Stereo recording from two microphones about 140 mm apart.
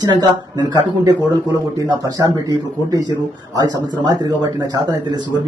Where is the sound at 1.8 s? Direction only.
25° right (ahead or behind).